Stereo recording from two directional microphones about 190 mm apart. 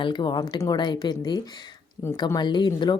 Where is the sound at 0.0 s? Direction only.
25° left (ahead or behind).